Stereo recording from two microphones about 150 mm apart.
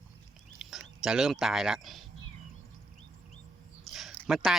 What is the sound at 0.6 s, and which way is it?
Speech, 5° right (ahead or behind).